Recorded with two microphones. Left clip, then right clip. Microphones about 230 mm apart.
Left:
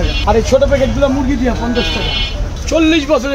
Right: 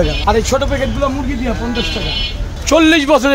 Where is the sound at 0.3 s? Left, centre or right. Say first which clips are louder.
Left 3 dB; right.